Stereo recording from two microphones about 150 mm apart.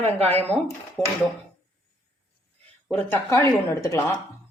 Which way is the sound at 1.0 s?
Centre (ahead or behind).